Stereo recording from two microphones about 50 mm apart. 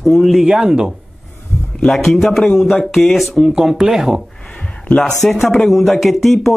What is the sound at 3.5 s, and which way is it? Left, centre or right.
Speech, centre.